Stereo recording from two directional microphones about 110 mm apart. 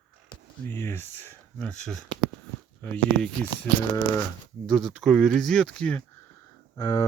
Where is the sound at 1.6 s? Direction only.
5° left (ahead or behind).